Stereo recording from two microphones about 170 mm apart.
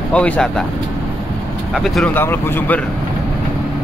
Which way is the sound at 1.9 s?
10° left (ahead or behind).